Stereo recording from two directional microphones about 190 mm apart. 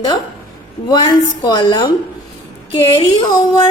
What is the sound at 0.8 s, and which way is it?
A woman's voice, 20° left (ahead or behind).